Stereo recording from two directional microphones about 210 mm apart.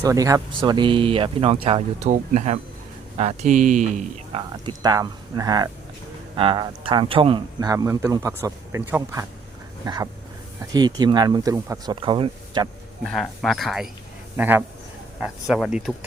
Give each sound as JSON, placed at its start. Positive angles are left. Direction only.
{"t": 0.0, "sound": "a man's voice", "side_deg": -15}
{"t": 9.8, "sound": "a sound", "side_deg": -15}
{"t": 10.7, "sound": "speech", "side_deg": -20}
{"t": 13.1, "sound": "a man's voice", "side_deg": 0}